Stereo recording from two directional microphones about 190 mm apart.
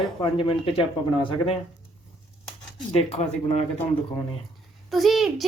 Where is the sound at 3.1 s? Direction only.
35° left (ahead or behind).